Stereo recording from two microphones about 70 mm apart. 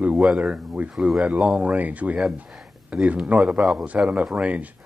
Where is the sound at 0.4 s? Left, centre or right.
Centre.